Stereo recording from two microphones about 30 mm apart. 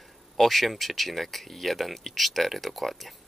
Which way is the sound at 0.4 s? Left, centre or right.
Centre.